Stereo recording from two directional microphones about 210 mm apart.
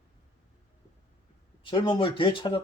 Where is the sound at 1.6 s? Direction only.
20° left (ahead or behind).